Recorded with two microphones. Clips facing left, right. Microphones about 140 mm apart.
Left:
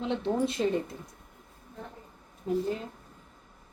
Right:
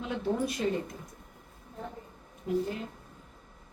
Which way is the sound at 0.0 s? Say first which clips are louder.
Left 2 dB; 25° left (ahead or behind).